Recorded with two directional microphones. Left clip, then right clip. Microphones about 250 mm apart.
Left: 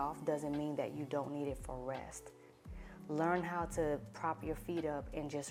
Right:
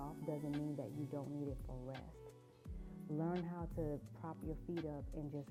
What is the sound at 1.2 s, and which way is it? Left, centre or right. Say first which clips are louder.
Speech: left 7 dB; left.